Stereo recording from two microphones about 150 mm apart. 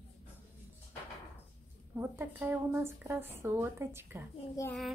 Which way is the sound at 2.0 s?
15° right (ahead or behind).